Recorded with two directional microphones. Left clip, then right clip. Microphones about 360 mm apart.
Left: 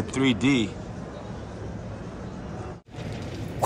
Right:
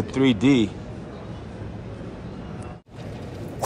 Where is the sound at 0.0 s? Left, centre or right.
Centre.